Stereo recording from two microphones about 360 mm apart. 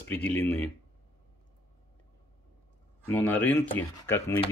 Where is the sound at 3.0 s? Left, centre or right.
Centre.